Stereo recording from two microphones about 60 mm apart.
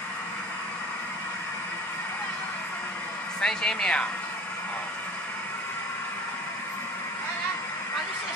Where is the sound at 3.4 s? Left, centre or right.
Centre.